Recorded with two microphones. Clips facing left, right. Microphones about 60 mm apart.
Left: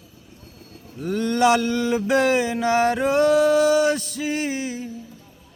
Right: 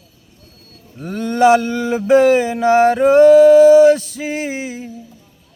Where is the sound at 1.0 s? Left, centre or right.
Right.